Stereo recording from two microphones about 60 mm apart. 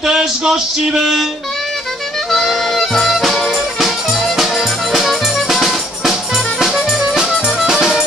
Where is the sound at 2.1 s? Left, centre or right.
Centre.